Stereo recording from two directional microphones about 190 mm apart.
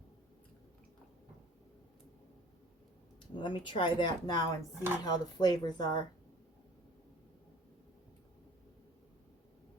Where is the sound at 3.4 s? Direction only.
25° left (ahead or behind).